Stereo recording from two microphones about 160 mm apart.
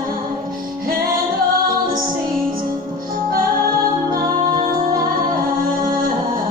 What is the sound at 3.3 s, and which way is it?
Music, 60° right (ahead or behind).